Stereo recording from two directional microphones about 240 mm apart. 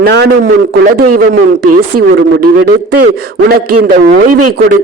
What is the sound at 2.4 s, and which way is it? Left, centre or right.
Speech, right.